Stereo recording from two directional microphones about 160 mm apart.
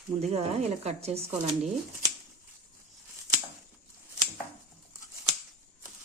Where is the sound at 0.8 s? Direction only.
40° right (ahead or behind).